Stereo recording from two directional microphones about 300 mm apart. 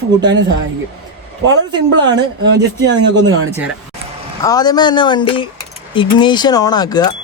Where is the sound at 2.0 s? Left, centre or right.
Right.